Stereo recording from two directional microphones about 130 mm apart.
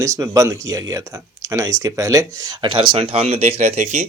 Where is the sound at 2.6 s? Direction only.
40° right (ahead or behind).